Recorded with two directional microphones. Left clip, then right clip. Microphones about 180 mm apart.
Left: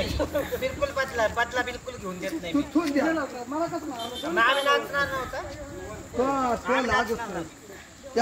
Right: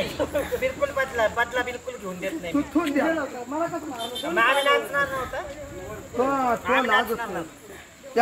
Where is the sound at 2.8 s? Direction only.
10° right (ahead or behind).